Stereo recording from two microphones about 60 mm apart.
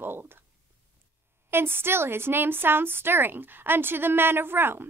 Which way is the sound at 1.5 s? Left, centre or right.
Right.